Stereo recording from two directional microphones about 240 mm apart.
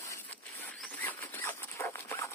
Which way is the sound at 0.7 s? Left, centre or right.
Centre.